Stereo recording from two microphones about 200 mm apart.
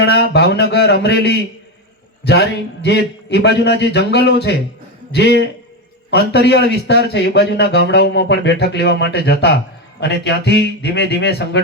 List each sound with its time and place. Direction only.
0.0 s a man's voice: 55° left (ahead or behind)